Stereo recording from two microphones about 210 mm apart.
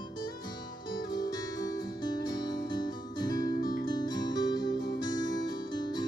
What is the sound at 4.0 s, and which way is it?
Music, 20° left (ahead or behind).